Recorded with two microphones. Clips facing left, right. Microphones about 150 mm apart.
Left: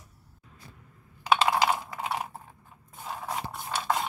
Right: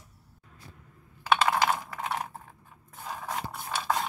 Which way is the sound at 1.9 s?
10° left (ahead or behind).